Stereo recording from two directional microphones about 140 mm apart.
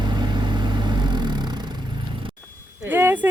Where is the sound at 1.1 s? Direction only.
30° right (ahead or behind).